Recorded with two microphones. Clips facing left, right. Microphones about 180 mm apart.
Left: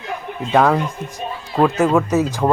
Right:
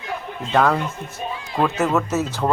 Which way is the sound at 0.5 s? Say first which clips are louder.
Left 3 dB; 10° left (ahead or behind).